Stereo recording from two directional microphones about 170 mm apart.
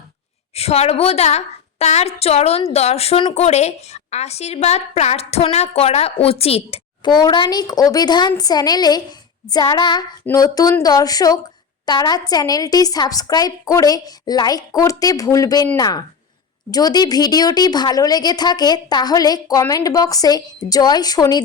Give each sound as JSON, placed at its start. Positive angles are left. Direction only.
{"t": 0.5, "sound": "a woman's voice", "side_deg": 40}